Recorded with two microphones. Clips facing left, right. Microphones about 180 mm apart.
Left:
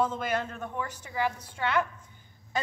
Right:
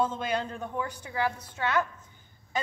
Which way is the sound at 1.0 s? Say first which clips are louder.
Left 2 dB; 5° left (ahead or behind).